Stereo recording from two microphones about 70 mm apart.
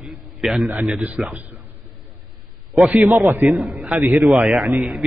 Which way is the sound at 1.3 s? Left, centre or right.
Right.